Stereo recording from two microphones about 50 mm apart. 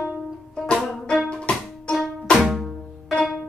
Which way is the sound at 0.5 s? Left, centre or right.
Centre.